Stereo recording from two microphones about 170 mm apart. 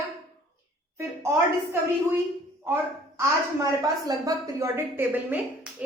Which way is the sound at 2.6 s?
15° right (ahead or behind).